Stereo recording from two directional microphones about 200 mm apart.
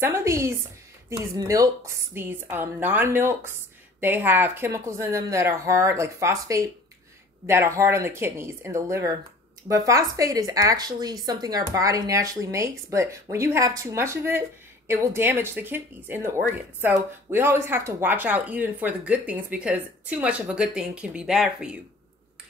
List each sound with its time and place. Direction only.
0.0 s speech: 15° right (ahead or behind)